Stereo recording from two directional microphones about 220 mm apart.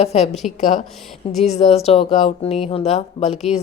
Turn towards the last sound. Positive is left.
turn(degrees=30)  # may be behind; listen again after turning